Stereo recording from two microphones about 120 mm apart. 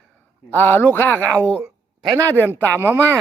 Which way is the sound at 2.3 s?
15° left (ahead or behind).